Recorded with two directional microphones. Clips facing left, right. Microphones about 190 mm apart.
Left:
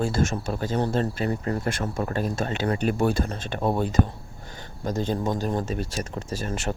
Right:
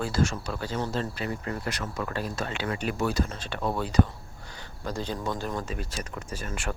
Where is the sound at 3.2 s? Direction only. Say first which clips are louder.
Left 5 dB; 40° left (ahead or behind).